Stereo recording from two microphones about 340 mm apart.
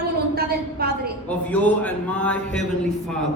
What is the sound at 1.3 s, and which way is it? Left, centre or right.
Speech, centre.